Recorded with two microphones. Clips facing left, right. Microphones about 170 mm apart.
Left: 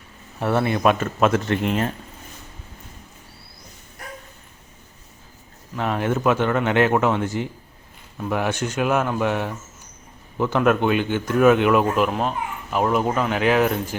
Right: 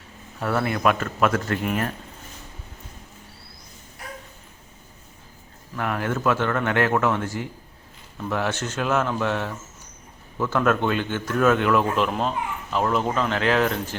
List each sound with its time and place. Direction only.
0.3 s a man's voice: 20° left (ahead or behind)
5.7 s a man's voice: 20° left (ahead or behind)
12.0 s a man's voice: 5° left (ahead or behind)